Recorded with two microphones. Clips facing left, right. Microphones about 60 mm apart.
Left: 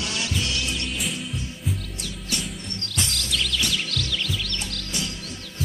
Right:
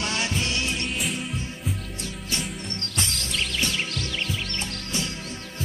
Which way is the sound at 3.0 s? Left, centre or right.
Right.